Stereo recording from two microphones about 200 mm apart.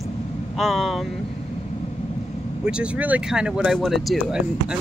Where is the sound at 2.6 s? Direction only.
5° right (ahead or behind).